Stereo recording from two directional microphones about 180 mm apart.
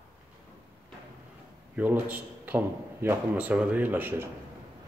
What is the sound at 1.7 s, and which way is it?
A man's voice, 10° right (ahead or behind).